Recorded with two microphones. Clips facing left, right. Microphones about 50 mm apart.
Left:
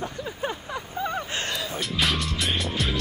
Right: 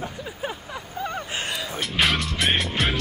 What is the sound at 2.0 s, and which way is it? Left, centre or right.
Music, centre.